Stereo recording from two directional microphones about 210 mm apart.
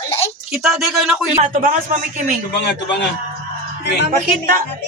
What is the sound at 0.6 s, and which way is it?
Speech, centre (ahead or behind).